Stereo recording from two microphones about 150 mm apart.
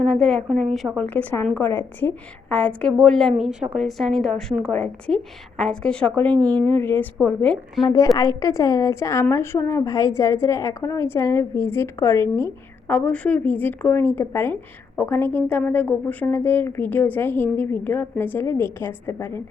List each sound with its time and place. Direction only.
0.0 s a woman's voice: centre (ahead or behind)
7.9 s a woman's voice: 25° left (ahead or behind)
12.9 s speech: 10° left (ahead or behind)